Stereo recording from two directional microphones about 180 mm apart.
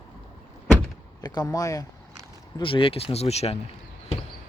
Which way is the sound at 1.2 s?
20° left (ahead or behind).